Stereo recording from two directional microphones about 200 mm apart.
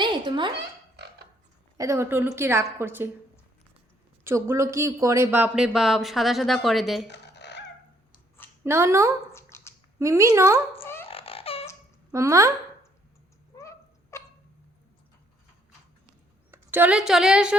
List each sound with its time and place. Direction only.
0.0 s a sound: 25° right (ahead or behind)
1.8 s a woman's voice: 15° right (ahead or behind)
4.2 s speech: 10° right (ahead or behind)
7.1 s dog: 60° left (ahead or behind)
8.6 s a woman's voice: 15° right (ahead or behind)
9.3 s dog: 15° left (ahead or behind)
10.0 s a woman's voice: 15° right (ahead or behind)
10.8 s laughter: 10° left (ahead or behind)
11.1 s a sound: 30° left (ahead or behind)
12.1 s a woman's voice: 15° right (ahead or behind)
13.6 s a sound: 15° left (ahead or behind)
16.5 s a woman's voice: 10° right (ahead or behind)